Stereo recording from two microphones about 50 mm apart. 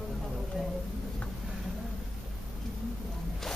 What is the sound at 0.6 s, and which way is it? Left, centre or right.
Speech, centre.